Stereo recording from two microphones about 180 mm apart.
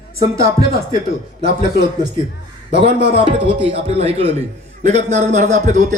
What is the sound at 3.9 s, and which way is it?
A man's voice, 35° right (ahead or behind).